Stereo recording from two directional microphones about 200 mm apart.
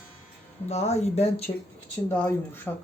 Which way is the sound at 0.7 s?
35° left (ahead or behind).